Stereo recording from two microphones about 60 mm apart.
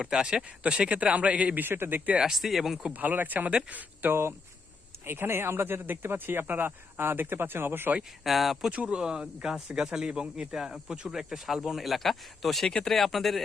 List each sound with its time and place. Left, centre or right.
0.0 s a man's voice: centre
1.5 s speech: right
2.0 s speech: centre
2.3 s speech: centre
2.9 s a man's voice: right
4.1 s speech: right
8.2 s speech: centre
8.7 s speech: right; by 13.4 s centre